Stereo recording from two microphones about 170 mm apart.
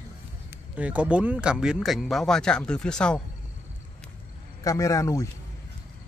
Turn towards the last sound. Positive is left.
turn(degrees=15)  # may be behind; listen again after turning